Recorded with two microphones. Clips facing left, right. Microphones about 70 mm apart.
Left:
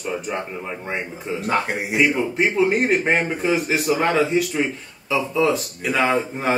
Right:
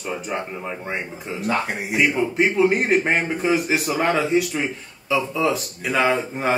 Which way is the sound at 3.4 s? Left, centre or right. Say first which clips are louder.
Even; centre.